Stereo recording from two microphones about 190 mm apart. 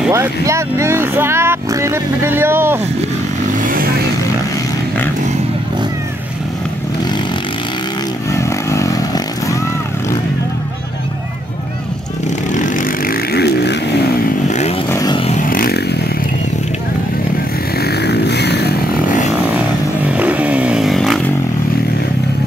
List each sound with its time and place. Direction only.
0.1 s speech: 15° right (ahead or behind)
3.6 s vehicle: 50° right (ahead or behind)
8.3 s motorcycle: 15° left (ahead or behind)
12.5 s vehicle: 45° left (ahead or behind); by 13.7 s 60° left (ahead or behind)
14.9 s vehicle: 20° left (ahead or behind)
15.3 s a sound: 45° left (ahead or behind)
17.7 s vehicle: 60° left (ahead or behind)
20.1 s motorcycle: 5° right (ahead or behind)